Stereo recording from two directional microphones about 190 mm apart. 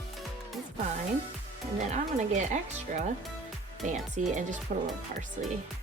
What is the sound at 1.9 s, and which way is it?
A woman's voice, 40° right (ahead or behind).